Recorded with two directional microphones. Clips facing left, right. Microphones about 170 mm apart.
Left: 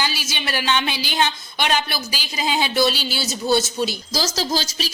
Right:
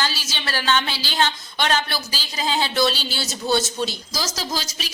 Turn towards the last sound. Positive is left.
turn(degrees=30)  # may be behind; listen again after turning